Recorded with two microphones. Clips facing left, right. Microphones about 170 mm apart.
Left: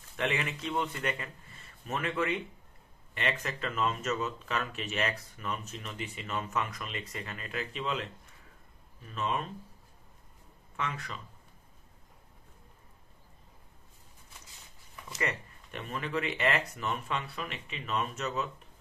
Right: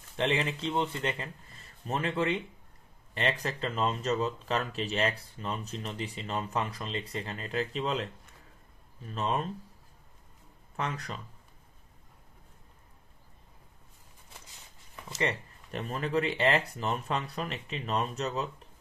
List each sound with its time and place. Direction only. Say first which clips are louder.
0.1 s speech: right 3 dB; 30° right (ahead or behind)
9.1 s speech: right 2 dB; 35° right (ahead or behind)
10.8 s speech: right 2 dB; 35° right (ahead or behind)
15.1 s speech: right 3 dB; 35° right (ahead or behind)